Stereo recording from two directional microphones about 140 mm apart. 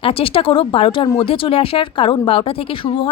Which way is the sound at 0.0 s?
40° left (ahead or behind).